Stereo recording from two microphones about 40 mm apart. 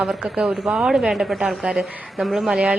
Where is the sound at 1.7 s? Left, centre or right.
Centre.